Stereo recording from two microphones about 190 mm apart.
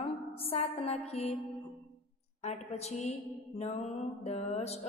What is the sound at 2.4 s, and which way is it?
Speech, 35° left (ahead or behind).